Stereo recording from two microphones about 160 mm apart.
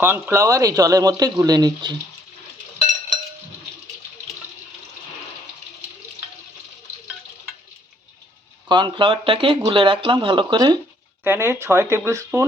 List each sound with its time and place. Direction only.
0.0 s speech: 15° right (ahead or behind)
8.7 s speech: 30° right (ahead or behind)
11.2 s speech: 15° right (ahead or behind)